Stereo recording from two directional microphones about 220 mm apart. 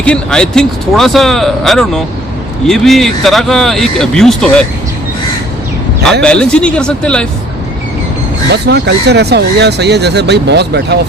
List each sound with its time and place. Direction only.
0.0 s speech: 5° left (ahead or behind)
6.2 s speech: 5° left (ahead or behind)
8.4 s speech: 50° right (ahead or behind)